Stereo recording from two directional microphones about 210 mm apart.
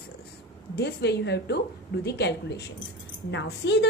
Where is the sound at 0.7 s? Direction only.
50° left (ahead or behind).